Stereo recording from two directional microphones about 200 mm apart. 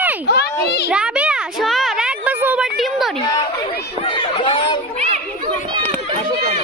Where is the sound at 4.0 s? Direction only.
25° left (ahead or behind).